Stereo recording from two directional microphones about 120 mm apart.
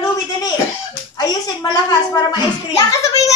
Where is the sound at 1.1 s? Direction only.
35° left (ahead or behind).